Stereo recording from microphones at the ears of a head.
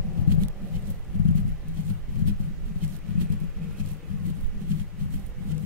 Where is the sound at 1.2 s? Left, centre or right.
Left.